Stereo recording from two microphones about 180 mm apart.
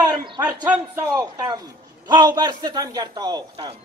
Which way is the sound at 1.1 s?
20° right (ahead or behind).